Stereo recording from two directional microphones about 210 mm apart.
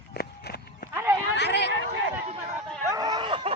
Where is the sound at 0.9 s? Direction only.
10° right (ahead or behind).